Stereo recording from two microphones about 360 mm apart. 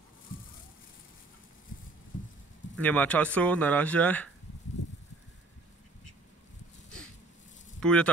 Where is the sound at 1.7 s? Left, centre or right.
Left.